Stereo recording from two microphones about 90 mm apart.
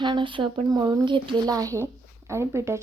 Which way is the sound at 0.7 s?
45° right (ahead or behind).